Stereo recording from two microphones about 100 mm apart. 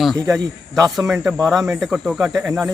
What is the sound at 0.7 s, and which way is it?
Speech, 30° right (ahead or behind).